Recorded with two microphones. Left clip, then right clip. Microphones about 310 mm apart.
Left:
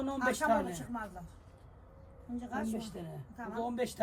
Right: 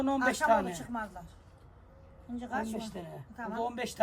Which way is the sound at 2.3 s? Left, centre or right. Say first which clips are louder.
Right 3 dB; centre.